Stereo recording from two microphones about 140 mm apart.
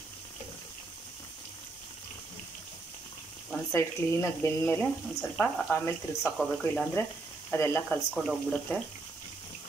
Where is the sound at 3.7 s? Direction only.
20° left (ahead or behind).